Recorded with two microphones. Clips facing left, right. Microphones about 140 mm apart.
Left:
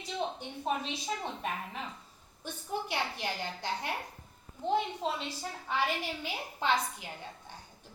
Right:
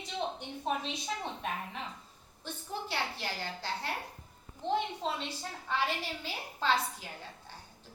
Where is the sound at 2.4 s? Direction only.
15° left (ahead or behind).